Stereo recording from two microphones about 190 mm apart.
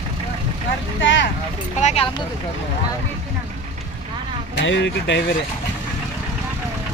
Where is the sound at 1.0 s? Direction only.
75° left (ahead or behind).